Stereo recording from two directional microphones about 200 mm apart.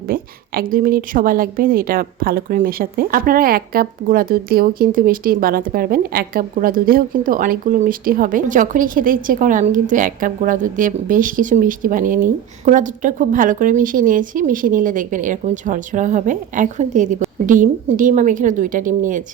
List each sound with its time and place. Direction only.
0.1 s a woman's voice: 45° right (ahead or behind)